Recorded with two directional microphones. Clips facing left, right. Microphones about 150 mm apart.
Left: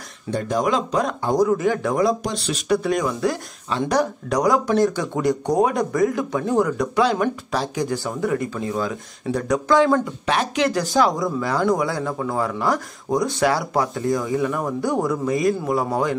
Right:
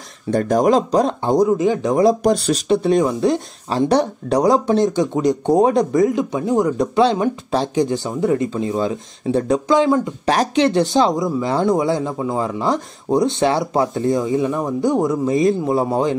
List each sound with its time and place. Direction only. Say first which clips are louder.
0.3 s speech: right 6 dB; 45° right (ahead or behind); by 2.0 s 20° right (ahead or behind)
2.0 s speech: right 7 dB; 40° right (ahead or behind)
2.7 s speech: right 4 dB; 25° right (ahead or behind)
10.2 s speech: right 5 dB; 35° right (ahead or behind)